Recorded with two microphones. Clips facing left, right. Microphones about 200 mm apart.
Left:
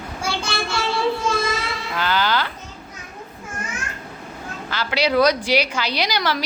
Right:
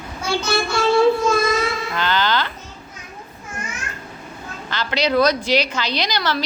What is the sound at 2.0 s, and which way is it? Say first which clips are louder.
Speech: even; 10° left (ahead or behind).